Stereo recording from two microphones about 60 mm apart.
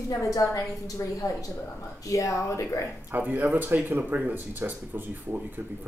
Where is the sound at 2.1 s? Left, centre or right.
Left.